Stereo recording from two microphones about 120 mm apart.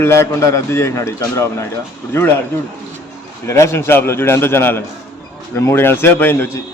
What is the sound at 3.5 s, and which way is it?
Speech, 25° left (ahead or behind).